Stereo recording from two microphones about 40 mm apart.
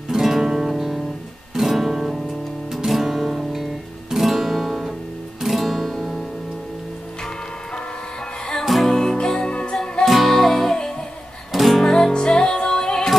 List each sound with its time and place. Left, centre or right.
0.1 s music: centre
1.5 s guitar: centre
2.7 s music: centre
5.4 s guitar: centre
8.6 s music: centre
8.9 s music: centre
10.0 s music: centre
10.8 s music: centre
11.5 s music: centre
11.9 s music: centre